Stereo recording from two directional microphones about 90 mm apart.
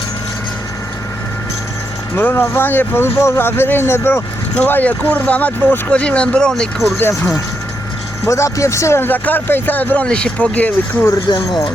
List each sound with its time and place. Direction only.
2.1 s speech: 25° left (ahead or behind)
4.5 s speech: 15° left (ahead or behind)
7.0 s speech: 30° left (ahead or behind)
11.3 s speech: 75° left (ahead or behind)